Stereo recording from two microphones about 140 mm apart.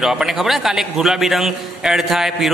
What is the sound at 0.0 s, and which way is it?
A man's voice, 5° right (ahead or behind).